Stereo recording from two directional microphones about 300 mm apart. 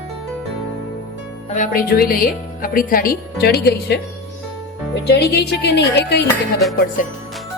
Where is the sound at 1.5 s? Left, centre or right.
Left.